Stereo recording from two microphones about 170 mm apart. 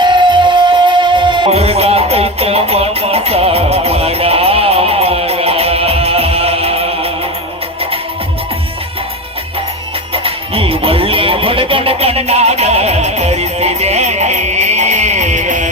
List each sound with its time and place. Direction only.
0.0 s music: 25° right (ahead or behind)
10.1 s music: 35° right (ahead or behind)